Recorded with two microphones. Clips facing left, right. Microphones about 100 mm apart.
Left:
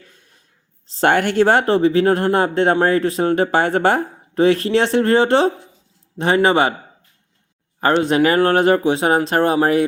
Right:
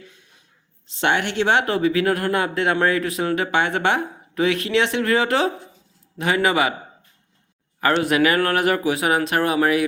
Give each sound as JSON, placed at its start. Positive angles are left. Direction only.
{"t": 0.0, "sound": "a sound", "side_deg": 45}
{"t": 0.9, "sound": "speech", "side_deg": 40}
{"t": 7.8, "sound": "speech", "side_deg": 30}